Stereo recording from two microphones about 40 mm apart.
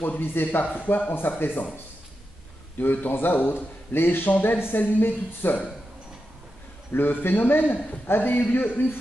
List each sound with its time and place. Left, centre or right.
0.0 s speech: left
2.8 s speech: left
4.3 s speech: left
6.9 s speech: left
8.1 s a man's voice: left
8.5 s speech: left